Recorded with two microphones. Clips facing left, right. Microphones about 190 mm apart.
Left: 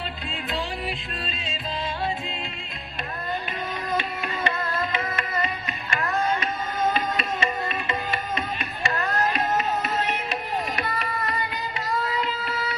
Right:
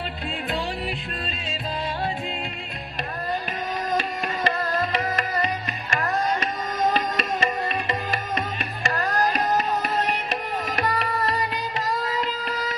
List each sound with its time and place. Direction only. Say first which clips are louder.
3.8 s music: right 2 dB; 40° right (ahead or behind)
12.0 s child singing: right 1 dB; 40° right (ahead or behind)